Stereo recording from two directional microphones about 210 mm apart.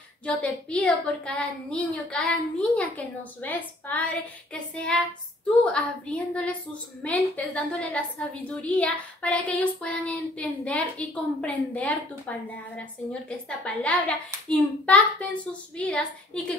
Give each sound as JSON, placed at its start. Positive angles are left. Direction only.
{"t": 0.2, "sound": "a woman's voice", "side_deg": 5}
{"t": 3.3, "sound": "child singing", "side_deg": 10}
{"t": 5.7, "sound": "a woman's voice", "side_deg": 5}